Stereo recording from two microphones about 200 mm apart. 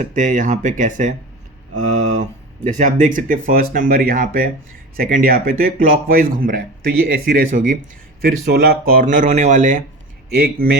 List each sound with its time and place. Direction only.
0.1 s speech: 40° right (ahead or behind)